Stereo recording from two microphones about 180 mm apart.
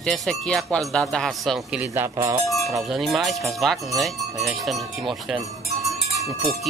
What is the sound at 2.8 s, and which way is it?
Speech, centre (ahead or behind).